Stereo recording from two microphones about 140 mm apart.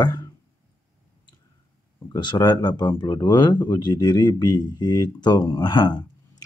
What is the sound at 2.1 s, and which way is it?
Speech, 30° left (ahead or behind).